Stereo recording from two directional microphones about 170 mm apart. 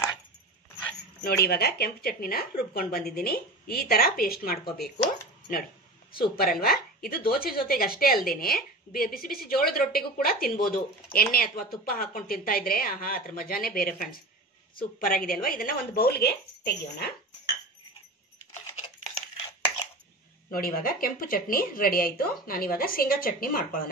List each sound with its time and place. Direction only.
1.2 s a woman's voice: 65° left (ahead or behind)
6.1 s a woman's voice: 60° left (ahead or behind)
20.5 s a woman's voice: 60° left (ahead or behind)